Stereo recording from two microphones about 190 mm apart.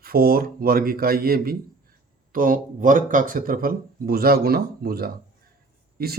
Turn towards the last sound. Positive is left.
turn(degrees=-55)  # may be behind; listen again after turning